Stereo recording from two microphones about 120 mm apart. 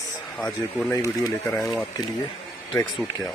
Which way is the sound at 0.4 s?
5° left (ahead or behind).